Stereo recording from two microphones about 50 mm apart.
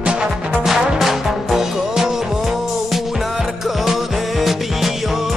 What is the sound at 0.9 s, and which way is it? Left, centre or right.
Music, centre.